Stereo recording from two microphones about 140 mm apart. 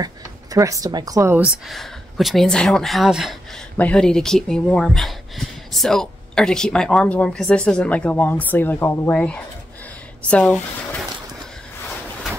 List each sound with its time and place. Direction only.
0.0 s speech: 25° right (ahead or behind)
1.7 s speech: centre (ahead or behind)